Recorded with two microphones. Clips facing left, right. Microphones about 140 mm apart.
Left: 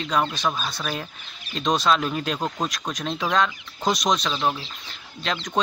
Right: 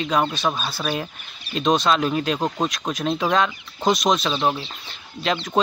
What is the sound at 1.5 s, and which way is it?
Speech, centre (ahead or behind).